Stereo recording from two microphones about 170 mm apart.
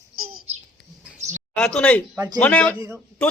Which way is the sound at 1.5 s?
5° left (ahead or behind).